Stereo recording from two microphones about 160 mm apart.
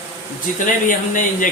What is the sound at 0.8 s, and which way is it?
Speech, 55° left (ahead or behind).